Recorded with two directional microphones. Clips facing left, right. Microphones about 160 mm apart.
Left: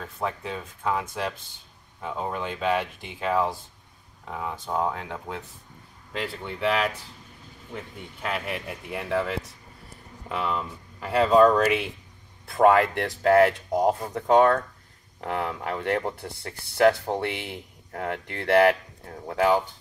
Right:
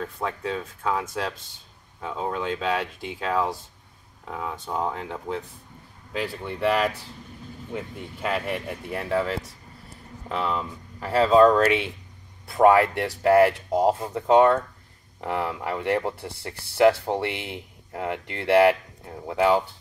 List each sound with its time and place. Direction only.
0.2 s speech: 10° left (ahead or behind); by 19.6 s 5° right (ahead or behind)